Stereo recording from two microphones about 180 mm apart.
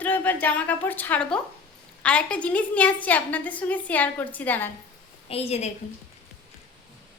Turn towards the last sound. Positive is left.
turn(degrees=35)  # may be behind; listen again after turning